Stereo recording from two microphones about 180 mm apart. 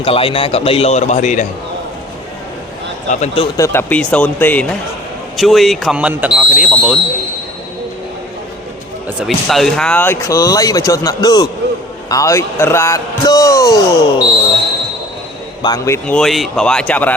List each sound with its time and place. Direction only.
0.0 s a man's voice: 30° left (ahead or behind)
3.1 s a man's voice: 40° left (ahead or behind)
3.6 s speech: 15° left (ahead or behind); by 7.0 s 5° right (ahead or behind)
9.2 s speech: centre (ahead or behind); by 14.3 s 20° left (ahead or behind)
15.6 s speech: 20° left (ahead or behind)
16.1 s speech: centre (ahead or behind)